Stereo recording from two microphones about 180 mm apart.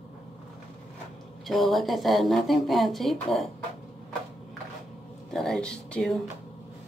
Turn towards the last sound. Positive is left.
turn(degrees=5)  # may be behind; listen again after turning